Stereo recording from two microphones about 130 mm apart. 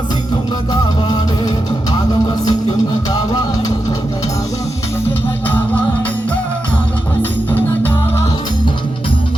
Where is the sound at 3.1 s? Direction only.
30° left (ahead or behind).